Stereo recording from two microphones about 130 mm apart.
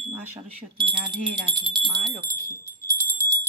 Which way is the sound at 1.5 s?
35° right (ahead or behind).